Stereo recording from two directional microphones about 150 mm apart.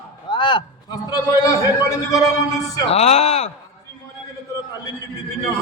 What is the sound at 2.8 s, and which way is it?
Speech, 45° left (ahead or behind).